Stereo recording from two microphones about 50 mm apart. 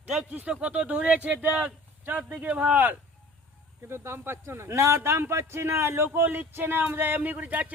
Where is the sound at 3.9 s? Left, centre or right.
Right.